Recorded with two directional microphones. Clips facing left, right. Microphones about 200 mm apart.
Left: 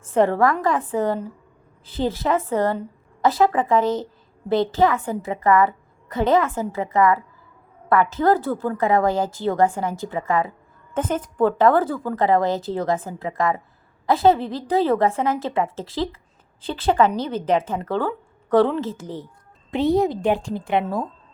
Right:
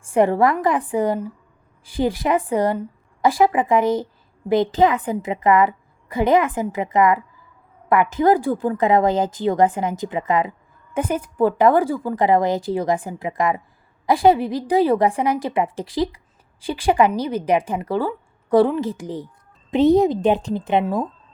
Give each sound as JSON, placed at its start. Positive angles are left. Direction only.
{"t": 0.0, "sound": "a woman's voice", "side_deg": -15}